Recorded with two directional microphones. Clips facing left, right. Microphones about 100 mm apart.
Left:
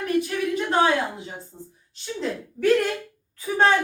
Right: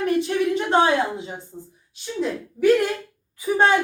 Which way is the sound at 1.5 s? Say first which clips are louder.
Right 3 dB; 10° right (ahead or behind).